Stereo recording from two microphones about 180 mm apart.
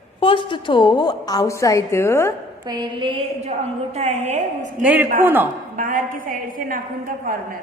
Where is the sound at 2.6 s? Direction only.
25° right (ahead or behind); by 4.4 s 40° right (ahead or behind).